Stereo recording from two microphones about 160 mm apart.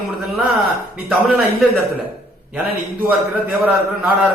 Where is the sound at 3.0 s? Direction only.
10° right (ahead or behind).